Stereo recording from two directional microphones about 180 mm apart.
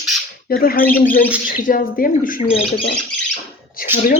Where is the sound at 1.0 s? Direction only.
50° left (ahead or behind).